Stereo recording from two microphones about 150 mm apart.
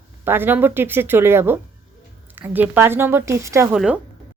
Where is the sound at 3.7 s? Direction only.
5° right (ahead or behind).